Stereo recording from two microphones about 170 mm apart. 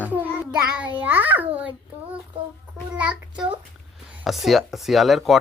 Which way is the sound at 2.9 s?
10° right (ahead or behind).